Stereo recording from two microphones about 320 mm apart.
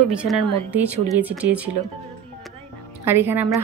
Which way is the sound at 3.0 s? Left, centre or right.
Centre.